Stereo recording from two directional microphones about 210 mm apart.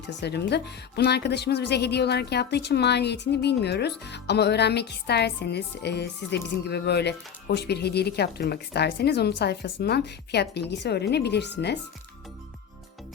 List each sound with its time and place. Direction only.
0.2 s a woman's voice: 55° left (ahead or behind)